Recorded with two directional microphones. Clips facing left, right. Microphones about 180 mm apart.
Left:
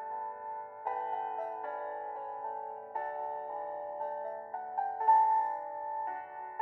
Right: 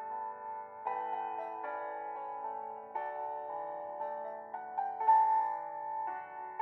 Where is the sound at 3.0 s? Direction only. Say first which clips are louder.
Left 2 dB; 45° left (ahead or behind).